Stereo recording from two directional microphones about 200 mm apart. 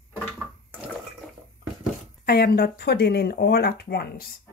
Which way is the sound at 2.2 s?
50° left (ahead or behind).